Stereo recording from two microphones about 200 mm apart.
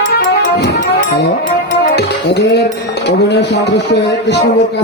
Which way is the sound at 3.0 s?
55° left (ahead or behind).